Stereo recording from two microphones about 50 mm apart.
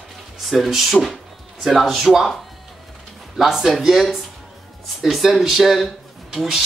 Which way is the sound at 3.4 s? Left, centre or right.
Centre.